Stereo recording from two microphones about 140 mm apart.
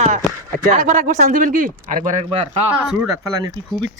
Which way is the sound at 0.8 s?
65° right (ahead or behind).